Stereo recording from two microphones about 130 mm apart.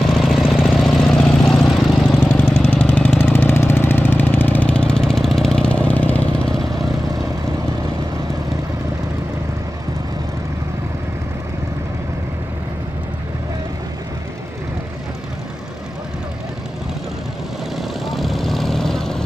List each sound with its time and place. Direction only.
0.2 s vehicle: centre (ahead or behind)
2.1 s vehicle: 15° left (ahead or behind)
17.7 s vehicle: centre (ahead or behind)